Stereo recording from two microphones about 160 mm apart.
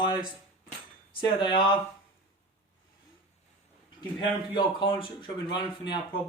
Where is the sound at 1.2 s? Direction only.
30° left (ahead or behind).